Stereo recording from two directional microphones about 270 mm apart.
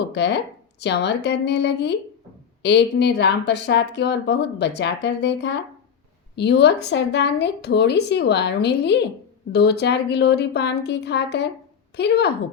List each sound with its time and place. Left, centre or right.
0.1 s speech: left